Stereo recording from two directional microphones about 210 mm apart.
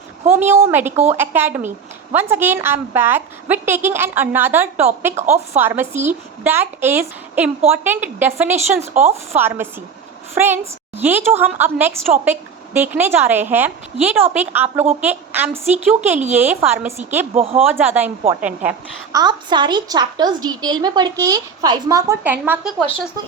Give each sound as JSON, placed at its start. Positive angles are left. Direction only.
{"t": 0.3, "sound": "a woman's voice", "side_deg": -10}
{"t": 5.1, "sound": "speech", "side_deg": -30}
{"t": 5.5, "sound": "a woman's voice", "side_deg": -10}
{"t": 8.9, "sound": "speech", "side_deg": -30}
{"t": 9.3, "sound": "a woman's voice", "side_deg": -10}
{"t": 17.3, "sound": "a woman's voice", "side_deg": -25}
{"t": 17.7, "sound": "a woman's voice", "side_deg": -10}
{"t": 19.1, "sound": "a woman's voice", "side_deg": -20}